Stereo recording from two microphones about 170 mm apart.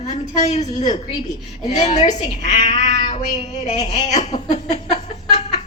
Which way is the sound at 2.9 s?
30° left (ahead or behind).